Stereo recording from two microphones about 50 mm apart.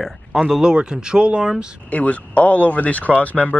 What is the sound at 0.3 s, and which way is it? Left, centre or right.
Speech, centre.